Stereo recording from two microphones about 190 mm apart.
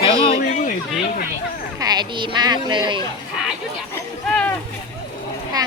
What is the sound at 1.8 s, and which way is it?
Speech, 20° right (ahead or behind).